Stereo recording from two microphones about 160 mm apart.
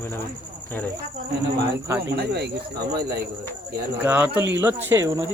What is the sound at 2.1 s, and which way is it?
Speech, 90° right.